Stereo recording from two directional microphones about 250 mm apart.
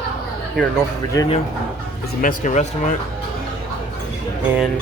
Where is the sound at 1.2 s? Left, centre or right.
Centre.